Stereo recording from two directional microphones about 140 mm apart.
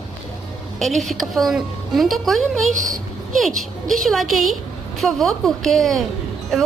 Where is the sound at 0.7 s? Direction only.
Centre (ahead or behind).